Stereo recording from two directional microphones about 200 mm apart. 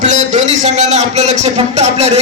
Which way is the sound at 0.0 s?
35° right (ahead or behind).